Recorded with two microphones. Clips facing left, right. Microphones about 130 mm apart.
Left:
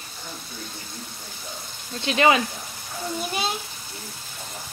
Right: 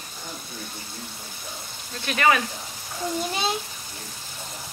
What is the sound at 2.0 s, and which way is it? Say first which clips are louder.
Frying: left 2 dB; 20° left (ahead or behind).